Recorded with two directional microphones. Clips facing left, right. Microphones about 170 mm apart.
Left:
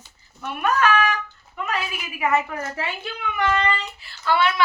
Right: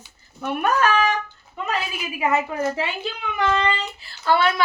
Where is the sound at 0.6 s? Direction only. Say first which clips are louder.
Even; 35° right (ahead or behind).